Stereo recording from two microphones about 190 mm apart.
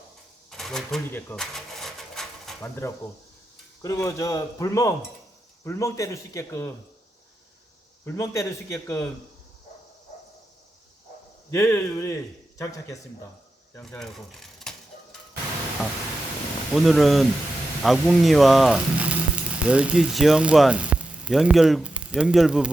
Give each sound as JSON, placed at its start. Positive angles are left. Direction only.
{"t": 0.5, "sound": "cash register", "side_deg": 0}
{"t": 2.6, "sound": "speech", "side_deg": 15}
{"t": 8.0, "sound": "speech", "side_deg": 15}
{"t": 11.5, "sound": "speech", "side_deg": 15}
{"t": 16.7, "sound": "speech", "side_deg": 0}